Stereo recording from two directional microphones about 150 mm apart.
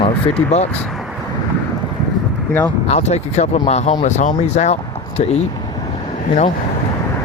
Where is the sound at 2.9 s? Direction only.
50° left (ahead or behind).